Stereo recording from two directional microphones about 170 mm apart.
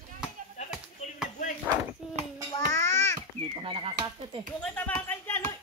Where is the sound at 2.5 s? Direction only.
20° left (ahead or behind).